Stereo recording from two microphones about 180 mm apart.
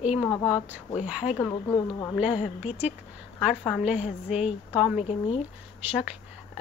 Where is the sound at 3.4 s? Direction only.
5° left (ahead or behind).